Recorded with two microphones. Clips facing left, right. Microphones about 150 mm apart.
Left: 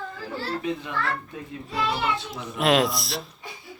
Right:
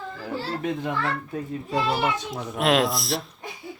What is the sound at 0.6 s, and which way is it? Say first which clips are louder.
A child's voice: right 3 dB; 50° right (ahead or behind).